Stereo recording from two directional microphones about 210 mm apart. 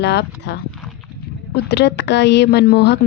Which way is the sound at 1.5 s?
55° left (ahead or behind).